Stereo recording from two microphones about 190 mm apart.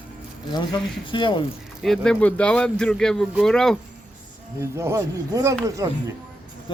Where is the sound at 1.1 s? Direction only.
25° left (ahead or behind).